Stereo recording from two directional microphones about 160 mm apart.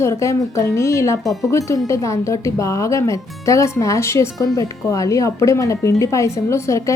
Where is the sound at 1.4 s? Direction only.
20° left (ahead or behind).